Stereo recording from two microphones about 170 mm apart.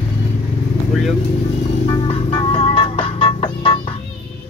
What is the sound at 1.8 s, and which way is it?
Music, 30° left (ahead or behind).